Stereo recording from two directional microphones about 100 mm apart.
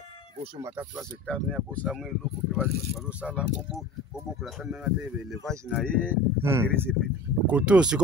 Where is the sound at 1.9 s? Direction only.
5° right (ahead or behind).